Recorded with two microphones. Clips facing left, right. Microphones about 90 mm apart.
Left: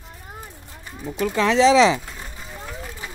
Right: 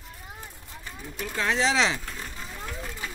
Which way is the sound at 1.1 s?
90° left.